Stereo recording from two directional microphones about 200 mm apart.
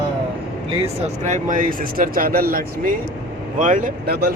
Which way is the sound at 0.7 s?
30° right (ahead or behind).